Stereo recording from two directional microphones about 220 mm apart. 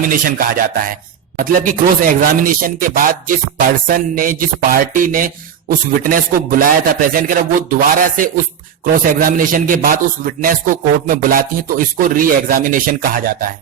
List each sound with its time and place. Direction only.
0.1 s speech: 40° right (ahead or behind)